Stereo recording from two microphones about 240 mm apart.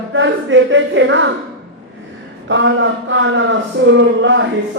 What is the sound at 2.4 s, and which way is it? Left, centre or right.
A man's voice, right.